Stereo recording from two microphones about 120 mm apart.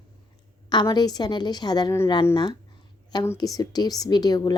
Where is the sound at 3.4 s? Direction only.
30° left (ahead or behind).